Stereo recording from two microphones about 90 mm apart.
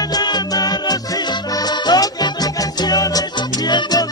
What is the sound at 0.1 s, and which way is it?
Music, 50° left (ahead or behind).